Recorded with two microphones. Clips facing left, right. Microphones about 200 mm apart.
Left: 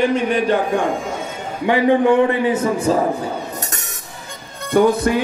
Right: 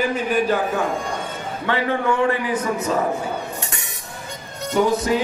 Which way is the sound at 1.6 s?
15° left (ahead or behind).